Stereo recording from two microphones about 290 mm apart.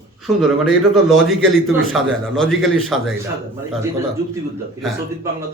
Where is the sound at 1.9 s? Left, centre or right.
Centre.